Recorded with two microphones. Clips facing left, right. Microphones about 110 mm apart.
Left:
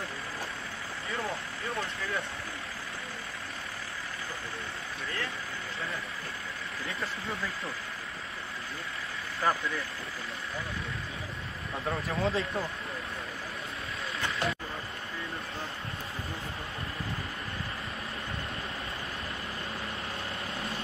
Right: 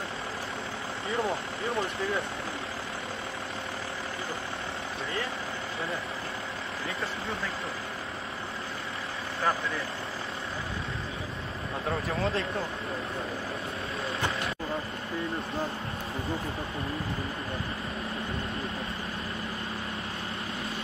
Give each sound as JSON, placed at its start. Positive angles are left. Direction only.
{"t": 1.1, "sound": "speech", "side_deg": -25}
{"t": 12.2, "sound": "speech", "side_deg": 0}